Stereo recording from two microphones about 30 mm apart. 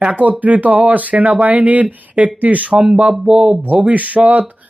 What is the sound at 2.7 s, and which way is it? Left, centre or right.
Speech, right.